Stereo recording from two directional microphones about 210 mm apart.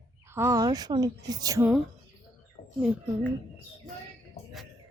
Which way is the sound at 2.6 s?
50° left (ahead or behind).